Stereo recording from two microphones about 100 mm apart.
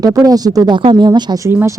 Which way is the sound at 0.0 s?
40° right (ahead or behind).